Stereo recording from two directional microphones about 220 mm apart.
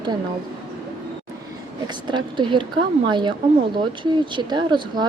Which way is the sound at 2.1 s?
20° right (ahead or behind).